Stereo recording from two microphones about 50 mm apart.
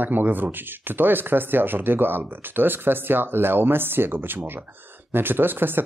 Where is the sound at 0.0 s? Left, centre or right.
Right.